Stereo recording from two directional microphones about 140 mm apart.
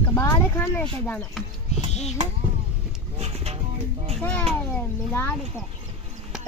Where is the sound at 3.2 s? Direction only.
50° right (ahead or behind).